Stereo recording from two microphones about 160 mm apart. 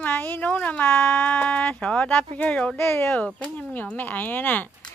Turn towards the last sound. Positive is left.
turn(degrees=10)  # may be behind; listen again after turning